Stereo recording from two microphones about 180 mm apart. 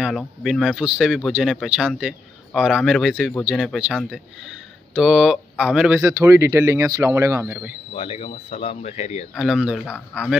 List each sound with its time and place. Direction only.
0.0 s speech: centre (ahead or behind)
7.9 s speech: 30° left (ahead or behind)
9.3 s speech: centre (ahead or behind)